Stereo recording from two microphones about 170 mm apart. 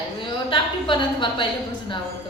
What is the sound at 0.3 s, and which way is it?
A woman's voice, 30° left (ahead or behind).